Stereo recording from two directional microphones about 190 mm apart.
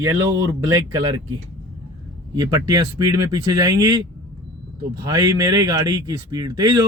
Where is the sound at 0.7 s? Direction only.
20° right (ahead or behind).